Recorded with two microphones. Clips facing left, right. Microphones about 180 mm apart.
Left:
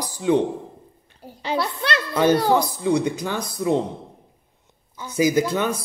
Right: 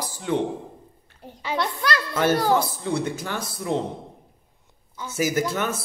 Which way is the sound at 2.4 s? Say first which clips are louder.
Left 3 dB; 15° left (ahead or behind).